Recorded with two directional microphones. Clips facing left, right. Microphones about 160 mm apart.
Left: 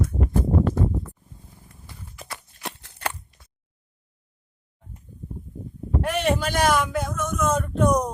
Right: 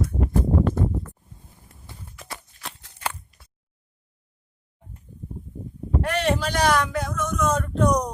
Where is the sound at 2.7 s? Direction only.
70° left (ahead or behind).